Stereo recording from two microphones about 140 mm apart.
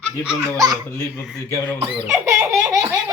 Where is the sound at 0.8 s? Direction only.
15° left (ahead or behind).